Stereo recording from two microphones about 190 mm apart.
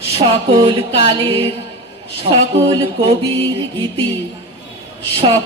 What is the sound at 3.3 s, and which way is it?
Mantra, 10° left (ahead or behind).